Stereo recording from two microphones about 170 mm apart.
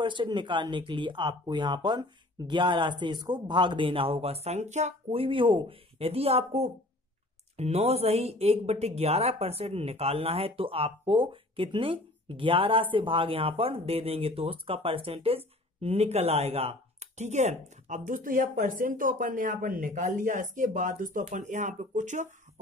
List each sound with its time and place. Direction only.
0.0 s speech: 30° right (ahead or behind); by 22.3 s 45° right (ahead or behind)